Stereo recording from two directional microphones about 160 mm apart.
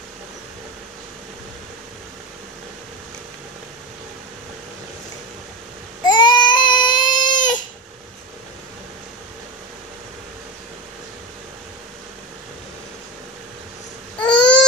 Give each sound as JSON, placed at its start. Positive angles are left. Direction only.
{"t": 6.0, "sound": "child singing", "side_deg": 25}
{"t": 7.3, "sound": "a sound", "side_deg": 30}
{"t": 14.2, "sound": "babbling", "side_deg": 30}